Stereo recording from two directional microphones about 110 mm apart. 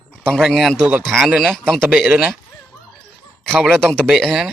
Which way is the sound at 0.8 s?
15° right (ahead or behind).